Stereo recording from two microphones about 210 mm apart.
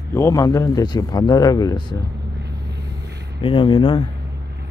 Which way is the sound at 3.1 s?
55° right (ahead or behind).